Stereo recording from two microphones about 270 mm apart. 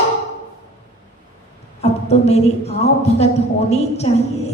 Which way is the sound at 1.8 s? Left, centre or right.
Left.